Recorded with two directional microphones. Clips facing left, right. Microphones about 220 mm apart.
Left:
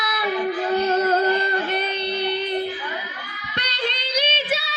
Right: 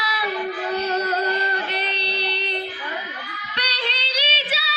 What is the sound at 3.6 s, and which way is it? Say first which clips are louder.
Child singing: left 2 dB; 45° left (ahead or behind).